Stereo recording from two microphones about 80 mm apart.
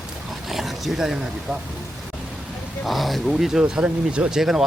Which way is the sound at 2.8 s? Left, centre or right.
Centre.